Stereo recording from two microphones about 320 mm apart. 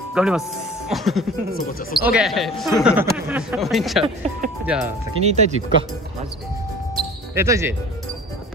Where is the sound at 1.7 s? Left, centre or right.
Left.